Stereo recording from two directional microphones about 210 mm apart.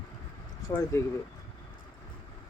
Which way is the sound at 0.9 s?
15° left (ahead or behind).